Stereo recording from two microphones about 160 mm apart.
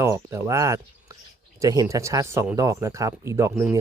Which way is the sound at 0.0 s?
20° right (ahead or behind).